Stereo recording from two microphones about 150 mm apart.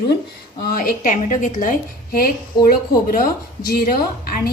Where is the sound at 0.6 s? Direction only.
75° left (ahead or behind); by 1.7 s 60° left (ahead or behind).